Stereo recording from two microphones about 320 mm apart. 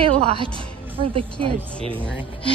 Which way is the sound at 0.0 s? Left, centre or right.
Centre.